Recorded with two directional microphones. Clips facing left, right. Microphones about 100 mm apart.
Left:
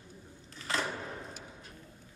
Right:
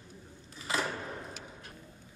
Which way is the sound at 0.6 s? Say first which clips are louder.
Right 1 dB; 10° right (ahead or behind).